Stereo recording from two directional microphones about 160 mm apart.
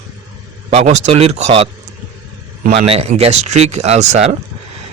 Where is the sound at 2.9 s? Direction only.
40° right (ahead or behind).